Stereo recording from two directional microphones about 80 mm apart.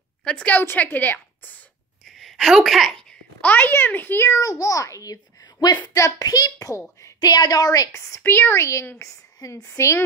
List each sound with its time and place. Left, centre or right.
0.2 s a woman's voice: centre
0.6 s a woman's voice: left
2.0 s a child's voice: centre; by 4.3 s left
4.3 s a child's voice: left
5.9 s speech: left
6.2 s a child's voice: left
8.2 s speech: left